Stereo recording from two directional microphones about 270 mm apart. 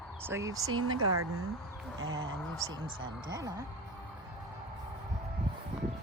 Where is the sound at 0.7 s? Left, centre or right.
Right.